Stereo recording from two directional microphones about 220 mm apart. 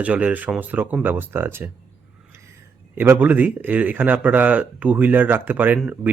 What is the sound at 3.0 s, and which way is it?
A man's voice, 10° right (ahead or behind).